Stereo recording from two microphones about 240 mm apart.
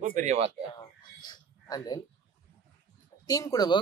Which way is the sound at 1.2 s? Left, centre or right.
Centre.